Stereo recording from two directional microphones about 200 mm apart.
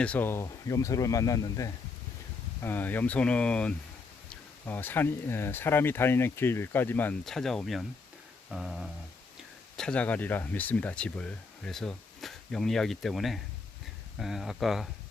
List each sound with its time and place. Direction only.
0.0 s speech: 10° left (ahead or behind)